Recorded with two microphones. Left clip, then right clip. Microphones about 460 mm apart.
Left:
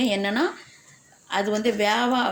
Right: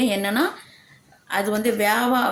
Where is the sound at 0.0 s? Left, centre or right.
Right.